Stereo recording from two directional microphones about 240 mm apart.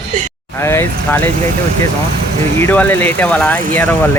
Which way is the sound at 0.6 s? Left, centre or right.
Centre.